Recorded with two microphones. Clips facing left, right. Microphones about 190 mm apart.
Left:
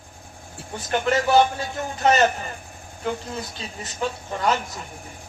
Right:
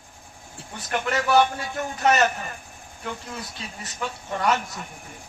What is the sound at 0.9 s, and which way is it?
A man's voice, 30° left (ahead or behind).